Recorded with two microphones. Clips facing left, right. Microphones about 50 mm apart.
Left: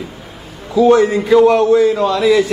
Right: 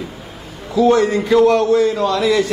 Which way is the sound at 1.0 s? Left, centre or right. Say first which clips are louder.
Left 3 dB; centre.